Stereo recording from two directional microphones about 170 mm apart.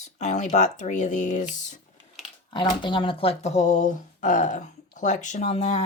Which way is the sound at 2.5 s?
30° left (ahead or behind).